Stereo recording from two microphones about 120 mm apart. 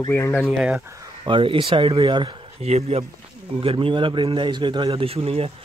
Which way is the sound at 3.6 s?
45° right (ahead or behind).